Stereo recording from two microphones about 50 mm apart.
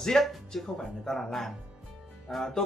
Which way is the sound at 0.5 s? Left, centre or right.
Centre.